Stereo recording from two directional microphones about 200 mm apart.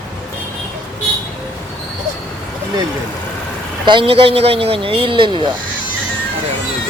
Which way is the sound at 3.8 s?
25° right (ahead or behind).